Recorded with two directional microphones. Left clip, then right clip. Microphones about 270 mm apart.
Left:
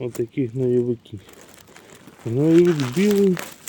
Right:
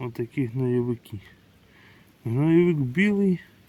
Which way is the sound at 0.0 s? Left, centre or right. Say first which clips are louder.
Left 5 dB; centre.